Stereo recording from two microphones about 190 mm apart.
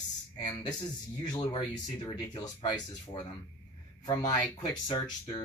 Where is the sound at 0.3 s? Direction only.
20° left (ahead or behind).